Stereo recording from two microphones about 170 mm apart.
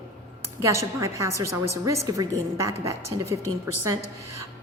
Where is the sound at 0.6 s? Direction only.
20° right (ahead or behind).